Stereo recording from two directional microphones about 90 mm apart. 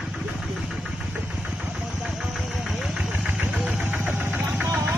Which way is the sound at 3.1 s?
15° right (ahead or behind).